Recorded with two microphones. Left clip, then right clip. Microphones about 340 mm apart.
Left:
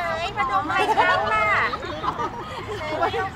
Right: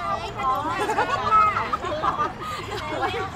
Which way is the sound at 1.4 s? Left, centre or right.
Left.